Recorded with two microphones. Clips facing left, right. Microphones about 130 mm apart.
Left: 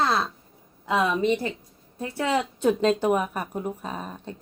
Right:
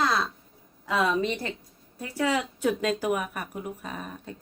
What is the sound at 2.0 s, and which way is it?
Speech, 25° left (ahead or behind).